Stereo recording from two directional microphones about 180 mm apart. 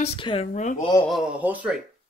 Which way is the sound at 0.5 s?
40° left (ahead or behind).